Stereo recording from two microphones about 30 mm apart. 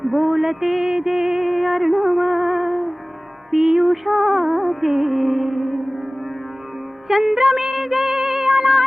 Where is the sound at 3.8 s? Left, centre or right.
Centre.